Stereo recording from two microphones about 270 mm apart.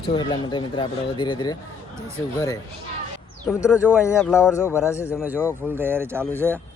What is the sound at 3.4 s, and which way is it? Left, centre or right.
A man's voice, centre.